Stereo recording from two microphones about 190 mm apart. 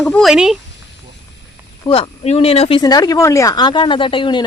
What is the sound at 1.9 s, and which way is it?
Speech, 30° left (ahead or behind).